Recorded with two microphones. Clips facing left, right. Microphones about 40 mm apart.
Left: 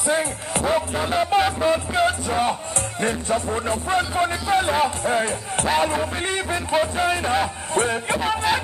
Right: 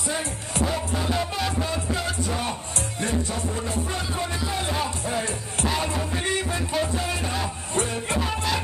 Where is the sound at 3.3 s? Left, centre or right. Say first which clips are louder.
Left 6 dB; left.